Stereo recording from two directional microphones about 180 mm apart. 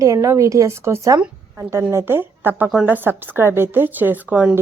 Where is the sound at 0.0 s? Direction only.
15° right (ahead or behind).